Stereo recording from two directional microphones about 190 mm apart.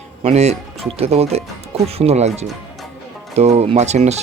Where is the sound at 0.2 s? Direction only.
35° right (ahead or behind).